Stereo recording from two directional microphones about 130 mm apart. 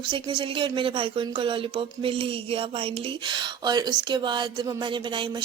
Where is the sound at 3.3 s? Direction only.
35° right (ahead or behind).